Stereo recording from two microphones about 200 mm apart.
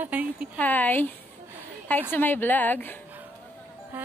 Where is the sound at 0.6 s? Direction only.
10° left (ahead or behind).